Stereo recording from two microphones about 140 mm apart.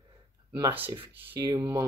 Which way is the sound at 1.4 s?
30° right (ahead or behind).